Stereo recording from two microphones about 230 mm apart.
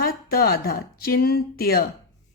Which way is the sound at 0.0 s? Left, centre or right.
Left.